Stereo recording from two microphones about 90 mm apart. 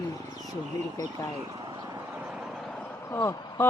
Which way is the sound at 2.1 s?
10° right (ahead or behind).